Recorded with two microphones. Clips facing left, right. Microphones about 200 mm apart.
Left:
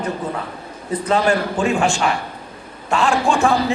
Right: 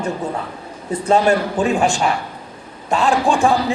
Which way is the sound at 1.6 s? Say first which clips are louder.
Right 1 dB; 35° right (ahead or behind).